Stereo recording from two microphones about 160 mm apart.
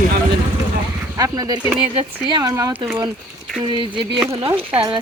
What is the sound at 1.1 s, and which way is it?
Speech, 20° right (ahead or behind).